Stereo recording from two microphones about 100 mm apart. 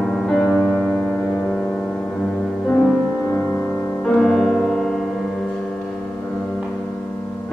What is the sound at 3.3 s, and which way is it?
Music, 20° left (ahead or behind).